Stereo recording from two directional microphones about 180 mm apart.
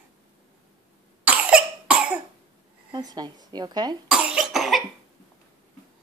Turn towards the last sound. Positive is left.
turn(degrees=0)  # may be behind; listen again after turning